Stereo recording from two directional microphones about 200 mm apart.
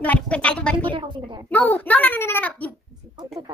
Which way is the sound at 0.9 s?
25° right (ahead or behind).